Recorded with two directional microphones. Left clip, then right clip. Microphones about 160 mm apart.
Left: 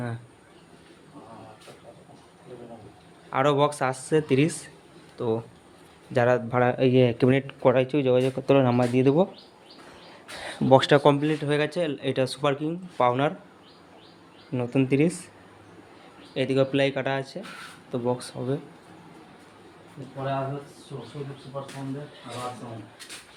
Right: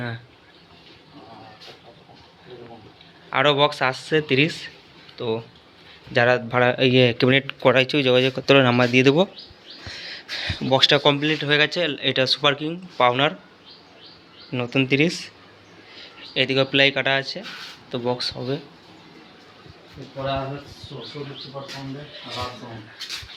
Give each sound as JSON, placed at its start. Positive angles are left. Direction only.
{"t": 3.2, "sound": "speech", "side_deg": 15}
{"t": 9.0, "sound": "speech", "side_deg": 5}
{"t": 10.3, "sound": "speech", "side_deg": 20}
{"t": 11.0, "sound": "speech", "side_deg": 15}
{"t": 14.5, "sound": "speech", "side_deg": 5}
{"t": 16.3, "sound": "speech", "side_deg": 10}